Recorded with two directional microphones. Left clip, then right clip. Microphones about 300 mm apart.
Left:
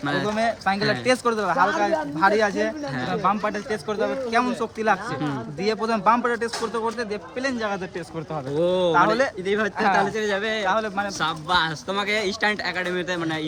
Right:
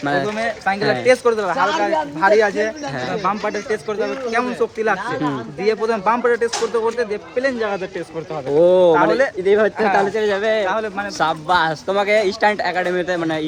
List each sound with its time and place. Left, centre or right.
0.0 s speech: centre
0.3 s speech: centre
10.7 s speech: centre
11.2 s speech: centre